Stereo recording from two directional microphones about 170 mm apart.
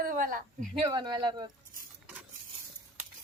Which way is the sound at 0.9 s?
25° right (ahead or behind).